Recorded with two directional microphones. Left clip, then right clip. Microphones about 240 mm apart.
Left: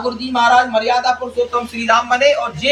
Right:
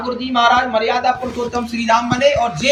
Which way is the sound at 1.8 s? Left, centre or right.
Centre.